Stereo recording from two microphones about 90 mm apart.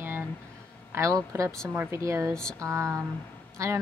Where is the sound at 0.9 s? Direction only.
35° right (ahead or behind).